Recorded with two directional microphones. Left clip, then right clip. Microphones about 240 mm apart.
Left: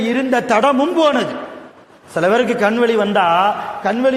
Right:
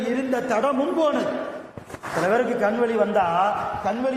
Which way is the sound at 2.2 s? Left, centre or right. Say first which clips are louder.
Left 7 dB; left.